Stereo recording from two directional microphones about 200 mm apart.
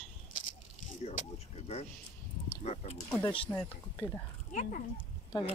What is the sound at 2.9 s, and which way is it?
Speech, 15° left (ahead or behind).